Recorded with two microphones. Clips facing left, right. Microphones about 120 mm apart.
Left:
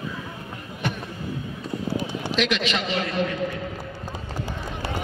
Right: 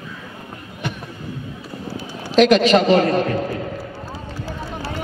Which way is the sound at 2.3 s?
40° right (ahead or behind).